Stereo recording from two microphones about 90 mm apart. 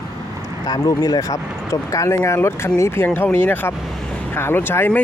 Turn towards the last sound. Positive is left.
turn(degrees=20)  # may be behind; listen again after turning